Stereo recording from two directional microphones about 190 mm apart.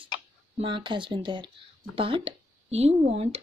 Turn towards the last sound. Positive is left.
turn(degrees=-35)  # may be behind; listen again after turning